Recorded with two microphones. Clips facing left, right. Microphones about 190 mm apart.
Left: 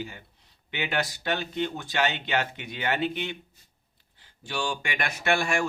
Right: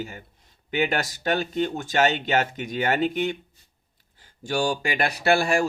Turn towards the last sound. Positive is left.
turn(degrees=-35)  # may be behind; listen again after turning